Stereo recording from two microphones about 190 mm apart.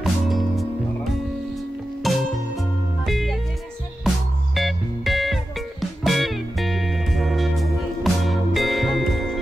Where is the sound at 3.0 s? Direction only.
Centre (ahead or behind).